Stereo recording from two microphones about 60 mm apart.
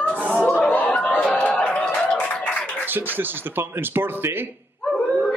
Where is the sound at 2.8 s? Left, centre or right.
Right.